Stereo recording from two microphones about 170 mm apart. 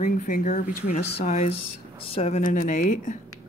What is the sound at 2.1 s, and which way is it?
Speech, 40° left (ahead or behind).